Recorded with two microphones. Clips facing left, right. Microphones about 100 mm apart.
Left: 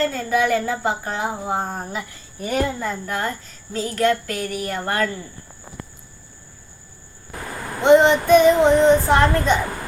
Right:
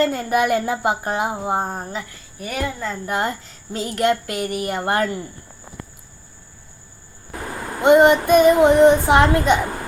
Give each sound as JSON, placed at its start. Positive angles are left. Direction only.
{"t": 0.0, "sound": "speech", "side_deg": -10}
{"t": 2.0, "sound": "speech", "side_deg": 25}
{"t": 2.7, "sound": "a woman's voice", "side_deg": 10}
{"t": 3.1, "sound": "speech", "side_deg": -20}
{"t": 7.8, "sound": "speech", "side_deg": -5}